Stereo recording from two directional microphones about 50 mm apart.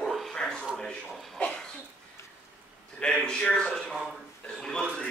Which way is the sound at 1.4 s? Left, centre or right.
Centre.